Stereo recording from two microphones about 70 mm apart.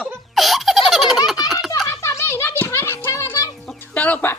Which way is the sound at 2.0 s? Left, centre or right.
Left.